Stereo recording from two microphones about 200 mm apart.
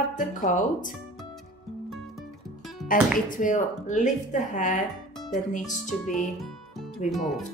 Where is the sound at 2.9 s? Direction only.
40° left (ahead or behind).